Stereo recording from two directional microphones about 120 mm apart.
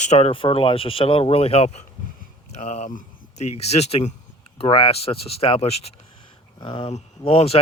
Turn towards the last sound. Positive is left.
turn(degrees=55)  # may be behind; listen again after turning